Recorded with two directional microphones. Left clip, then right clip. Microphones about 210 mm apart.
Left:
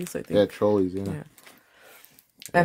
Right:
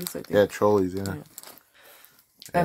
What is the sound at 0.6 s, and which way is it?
Speech, 30° right (ahead or behind).